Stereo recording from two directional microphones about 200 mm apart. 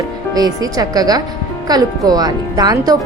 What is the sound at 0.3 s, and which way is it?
Speech, 20° right (ahead or behind).